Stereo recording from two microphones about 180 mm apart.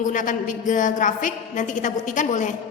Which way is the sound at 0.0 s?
45° left (ahead or behind).